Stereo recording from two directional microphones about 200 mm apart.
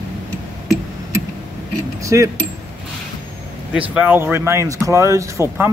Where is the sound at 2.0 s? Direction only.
15° right (ahead or behind).